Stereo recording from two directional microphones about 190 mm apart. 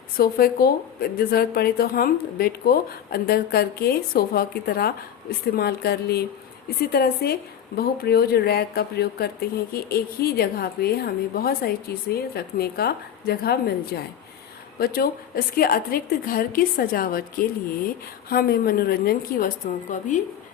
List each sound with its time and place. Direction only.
0.2 s a woman's voice: 55° left (ahead or behind)
19.9 s a woman's voice: 40° left (ahead or behind)